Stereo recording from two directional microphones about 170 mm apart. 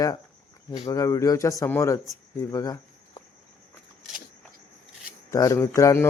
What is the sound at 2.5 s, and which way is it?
Cricket, 20° left (ahead or behind).